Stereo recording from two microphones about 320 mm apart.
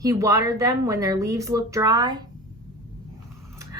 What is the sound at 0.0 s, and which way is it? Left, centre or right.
Speech, centre.